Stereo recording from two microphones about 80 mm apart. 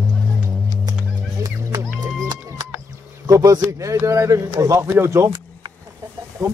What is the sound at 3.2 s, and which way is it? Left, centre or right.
A man's voice, right.